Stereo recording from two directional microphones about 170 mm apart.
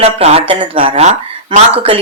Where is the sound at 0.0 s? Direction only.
35° right (ahead or behind).